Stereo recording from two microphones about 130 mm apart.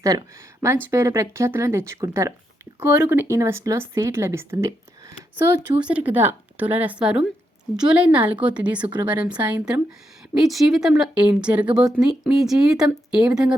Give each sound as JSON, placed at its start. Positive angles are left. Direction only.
{"t": 0.0, "sound": "speech", "side_deg": -25}